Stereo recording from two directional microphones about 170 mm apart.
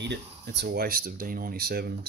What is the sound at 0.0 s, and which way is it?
Speech, 90° right.